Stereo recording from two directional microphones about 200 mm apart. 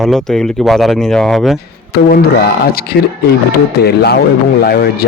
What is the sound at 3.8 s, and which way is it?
Speech, 55° left (ahead or behind).